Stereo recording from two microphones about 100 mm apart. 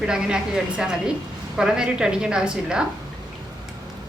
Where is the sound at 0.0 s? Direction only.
5° right (ahead or behind).